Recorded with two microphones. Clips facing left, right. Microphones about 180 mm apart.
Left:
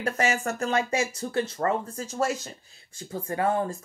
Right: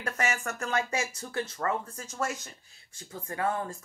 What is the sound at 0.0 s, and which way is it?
Speech, 30° left (ahead or behind).